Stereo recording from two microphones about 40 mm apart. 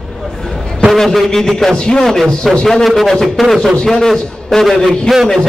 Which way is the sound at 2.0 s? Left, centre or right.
Centre.